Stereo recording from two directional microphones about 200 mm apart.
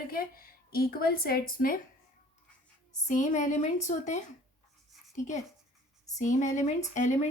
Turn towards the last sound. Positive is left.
turn(degrees=35)  # may be behind; listen again after turning